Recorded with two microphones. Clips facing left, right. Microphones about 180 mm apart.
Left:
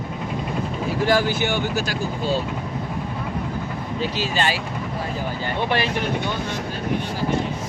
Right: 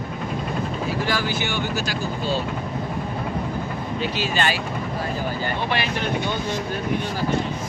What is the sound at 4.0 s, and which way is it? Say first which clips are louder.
Speech: left 1 dB; 35° left (ahead or behind).